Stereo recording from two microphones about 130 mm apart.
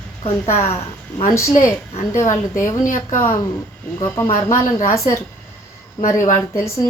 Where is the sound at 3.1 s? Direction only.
20° left (ahead or behind).